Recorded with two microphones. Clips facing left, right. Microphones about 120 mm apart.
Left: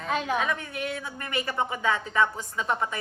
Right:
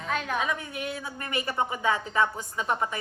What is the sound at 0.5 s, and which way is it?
Speech, 25° right (ahead or behind).